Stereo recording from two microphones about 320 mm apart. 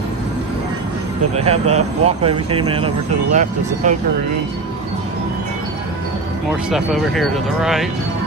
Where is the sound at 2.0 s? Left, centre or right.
Centre.